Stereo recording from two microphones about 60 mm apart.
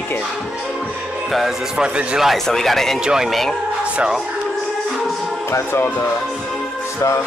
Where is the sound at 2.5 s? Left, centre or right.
Centre.